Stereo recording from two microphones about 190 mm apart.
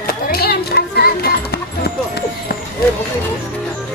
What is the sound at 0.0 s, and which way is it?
Music, 55° left (ahead or behind).